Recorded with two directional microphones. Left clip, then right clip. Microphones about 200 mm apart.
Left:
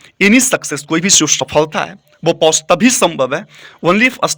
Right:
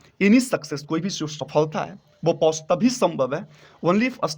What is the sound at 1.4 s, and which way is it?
A man's voice, 10° left (ahead or behind).